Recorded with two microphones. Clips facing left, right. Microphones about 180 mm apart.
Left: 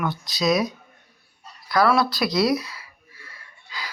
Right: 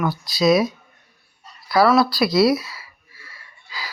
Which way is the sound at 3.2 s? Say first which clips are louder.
Right 1 dB; 5° right (ahead or behind).